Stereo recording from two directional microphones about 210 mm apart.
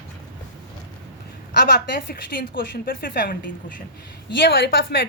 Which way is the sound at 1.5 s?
50° left (ahead or behind).